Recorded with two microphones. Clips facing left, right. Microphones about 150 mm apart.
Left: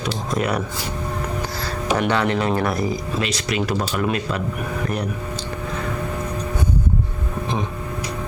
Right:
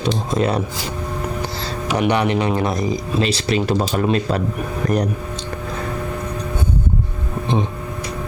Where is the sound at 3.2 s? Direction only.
30° right (ahead or behind).